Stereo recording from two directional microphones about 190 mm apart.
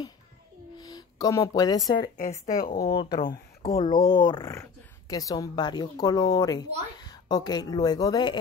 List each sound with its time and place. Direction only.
0.7 s speech: 20° left (ahead or behind)
2.6 s a woman's voice: 50° left (ahead or behind)
2.9 s speech: 25° left (ahead or behind)